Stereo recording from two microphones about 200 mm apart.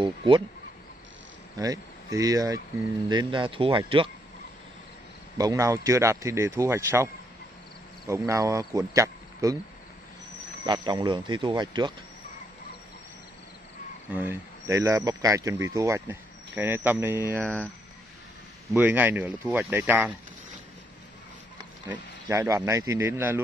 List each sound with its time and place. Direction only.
0.0 s speech: 25° right (ahead or behind)
1.6 s speech: 15° right (ahead or behind)
5.4 s speech: 15° right (ahead or behind)
8.1 s speech: 15° right (ahead or behind)
10.6 s speech: 20° right (ahead or behind)
14.1 s speech: 10° right (ahead or behind)
17.4 s speech: 5° left (ahead or behind)
18.7 s speech: 10° right (ahead or behind)
21.8 s speech: 10° right (ahead or behind)